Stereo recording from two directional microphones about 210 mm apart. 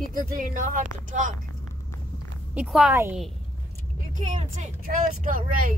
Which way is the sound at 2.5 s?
5° right (ahead or behind).